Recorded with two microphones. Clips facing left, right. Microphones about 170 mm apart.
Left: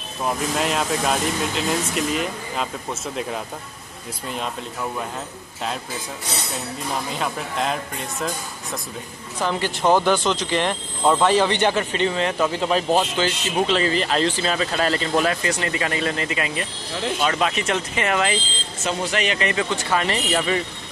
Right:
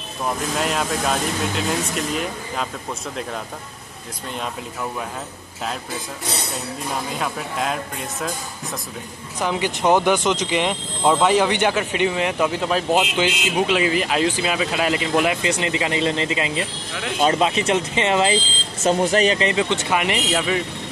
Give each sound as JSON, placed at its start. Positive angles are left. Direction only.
{"t": 0.2, "sound": "speech", "side_deg": 0}
{"t": 7.2, "sound": "speech", "side_deg": 0}
{"t": 9.4, "sound": "a man's voice", "side_deg": -15}
{"t": 18.9, "sound": "speech", "side_deg": -40}